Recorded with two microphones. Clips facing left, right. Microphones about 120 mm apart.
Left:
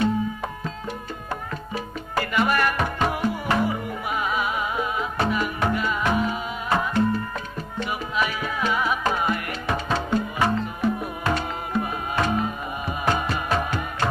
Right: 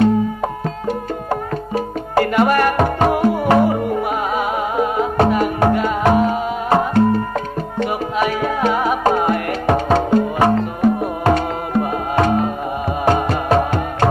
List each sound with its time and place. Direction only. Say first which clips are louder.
0.0 s music: right 8 dB; 55° right (ahead or behind)